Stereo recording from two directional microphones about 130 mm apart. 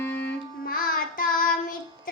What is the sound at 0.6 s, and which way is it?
Child singing, 90° left.